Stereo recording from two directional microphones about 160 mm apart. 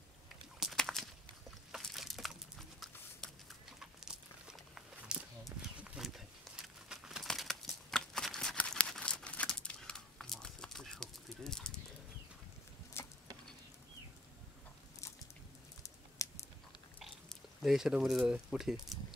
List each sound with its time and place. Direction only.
0.6 s a sound: centre (ahead or behind)
13.0 s insect: 15° left (ahead or behind)
15.8 s typing: 20° left (ahead or behind)
17.0 s speech: centre (ahead or behind)